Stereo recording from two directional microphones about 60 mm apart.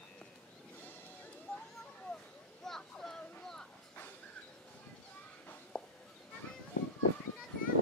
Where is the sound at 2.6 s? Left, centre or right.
Centre.